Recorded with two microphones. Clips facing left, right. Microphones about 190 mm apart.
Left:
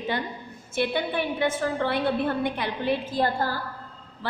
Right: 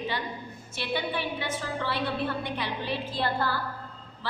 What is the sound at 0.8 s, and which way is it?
A woman's voice, 50° left (ahead or behind).